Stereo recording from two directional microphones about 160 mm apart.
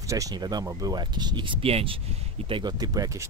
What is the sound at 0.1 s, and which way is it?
Speech, 20° right (ahead or behind).